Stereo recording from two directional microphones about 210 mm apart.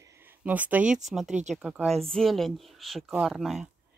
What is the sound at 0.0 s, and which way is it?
Speech, 10° right (ahead or behind).